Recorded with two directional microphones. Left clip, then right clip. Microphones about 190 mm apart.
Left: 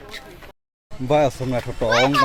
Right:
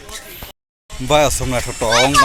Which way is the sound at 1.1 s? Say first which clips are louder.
Right 4 dB; centre (ahead or behind).